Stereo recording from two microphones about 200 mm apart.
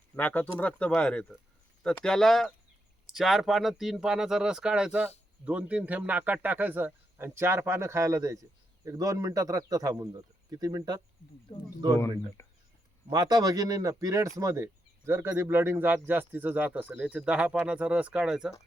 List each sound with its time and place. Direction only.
0.2 s speech: 10° left (ahead or behind); by 11.0 s 20° right (ahead or behind)
11.5 s speech: 25° left (ahead or behind)
13.1 s speech: 20° right (ahead or behind); by 18.5 s 5° right (ahead or behind)